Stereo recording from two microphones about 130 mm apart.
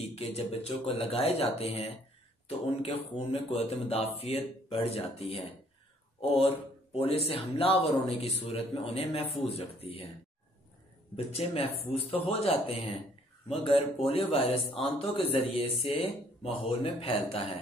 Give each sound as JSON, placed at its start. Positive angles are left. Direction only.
{"t": 0.0, "sound": "speech", "side_deg": 50}
{"t": 11.1, "sound": "speech", "side_deg": 50}